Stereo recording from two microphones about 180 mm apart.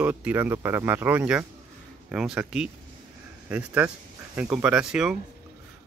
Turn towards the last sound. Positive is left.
turn(degrees=-5)  # may be behind; listen again after turning